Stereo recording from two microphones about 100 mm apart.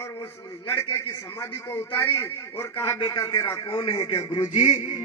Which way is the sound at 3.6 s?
55° left (ahead or behind).